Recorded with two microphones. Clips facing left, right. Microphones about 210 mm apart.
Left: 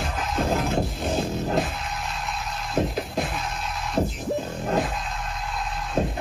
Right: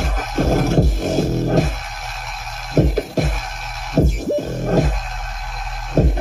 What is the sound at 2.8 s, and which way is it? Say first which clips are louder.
Music: right 8 dB; 45° right (ahead or behind).